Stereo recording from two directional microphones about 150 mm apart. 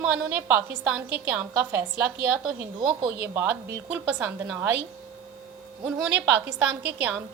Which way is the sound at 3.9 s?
10° right (ahead or behind).